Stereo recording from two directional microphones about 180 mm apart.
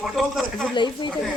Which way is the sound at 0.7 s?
25° left (ahead or behind).